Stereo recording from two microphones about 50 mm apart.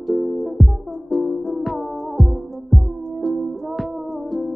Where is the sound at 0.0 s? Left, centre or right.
Centre.